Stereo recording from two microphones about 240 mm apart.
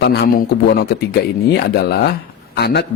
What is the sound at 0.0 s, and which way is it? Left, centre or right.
A man's voice, left.